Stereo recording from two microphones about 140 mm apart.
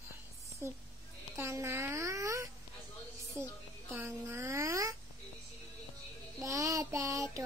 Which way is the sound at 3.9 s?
15° right (ahead or behind).